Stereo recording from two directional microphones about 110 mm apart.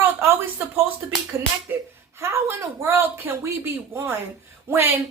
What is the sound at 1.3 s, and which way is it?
Speech, 25° right (ahead or behind).